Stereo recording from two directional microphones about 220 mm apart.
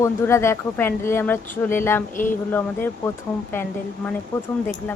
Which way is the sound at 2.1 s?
35° left (ahead or behind).